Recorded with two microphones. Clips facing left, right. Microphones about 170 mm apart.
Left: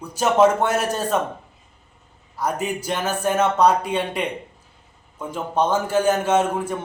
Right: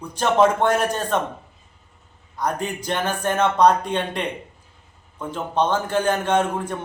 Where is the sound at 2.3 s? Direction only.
5° left (ahead or behind).